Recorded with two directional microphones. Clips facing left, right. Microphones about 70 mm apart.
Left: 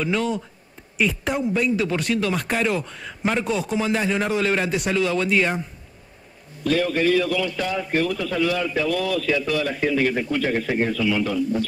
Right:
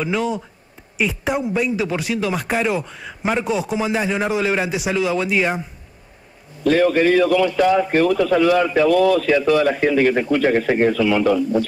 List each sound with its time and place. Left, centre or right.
0.0 s speech: centre
6.6 s a man's voice: right
7.5 s a man's voice: right